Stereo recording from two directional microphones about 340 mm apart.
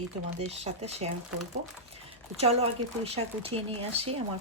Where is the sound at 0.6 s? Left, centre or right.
Centre.